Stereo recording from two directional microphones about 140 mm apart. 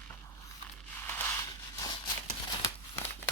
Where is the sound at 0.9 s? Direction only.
15° left (ahead or behind).